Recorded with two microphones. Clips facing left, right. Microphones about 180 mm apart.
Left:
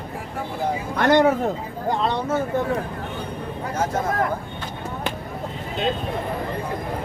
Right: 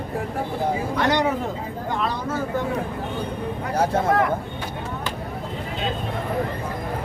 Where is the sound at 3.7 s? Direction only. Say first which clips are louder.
Right 3 dB; 30° right (ahead or behind).